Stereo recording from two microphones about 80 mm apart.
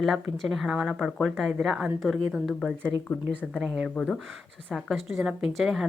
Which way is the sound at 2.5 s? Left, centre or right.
Centre.